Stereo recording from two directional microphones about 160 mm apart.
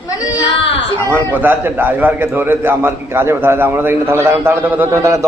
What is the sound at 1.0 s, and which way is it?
A man's voice, 15° right (ahead or behind).